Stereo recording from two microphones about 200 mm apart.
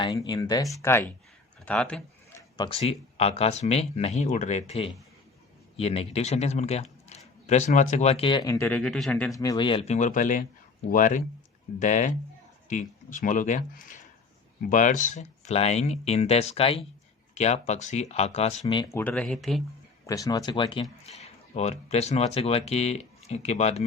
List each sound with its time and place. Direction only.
0.0 s speech: 20° left (ahead or behind)
1.6 s a sound: 5° left (ahead or behind)
2.8 s a man's voice: 30° left (ahead or behind); by 9.3 s 5° left (ahead or behind)
9.3 s a man's voice: 15° left (ahead or behind)
18.6 s speech: 20° left (ahead or behind); by 19.6 s centre (ahead or behind)
20.1 s speech: 15° left (ahead or behind); by 23.8 s 35° left (ahead or behind)